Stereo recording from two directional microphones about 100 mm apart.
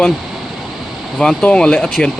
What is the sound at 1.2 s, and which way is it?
Speech, 10° left (ahead or behind).